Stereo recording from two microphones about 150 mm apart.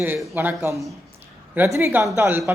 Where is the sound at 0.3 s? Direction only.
15° right (ahead or behind).